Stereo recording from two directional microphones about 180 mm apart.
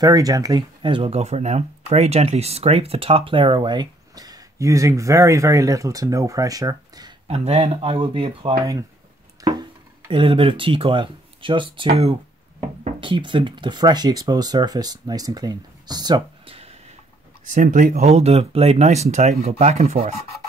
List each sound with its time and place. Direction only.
0.0 s speech: 20° right (ahead or behind)
7.2 s speech: 35° right (ahead or behind)
17.5 s speech: 45° right (ahead or behind)